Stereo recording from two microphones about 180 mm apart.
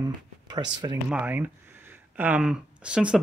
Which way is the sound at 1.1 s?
10° right (ahead or behind).